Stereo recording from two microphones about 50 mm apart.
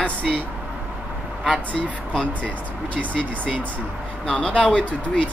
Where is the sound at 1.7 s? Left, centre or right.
Centre.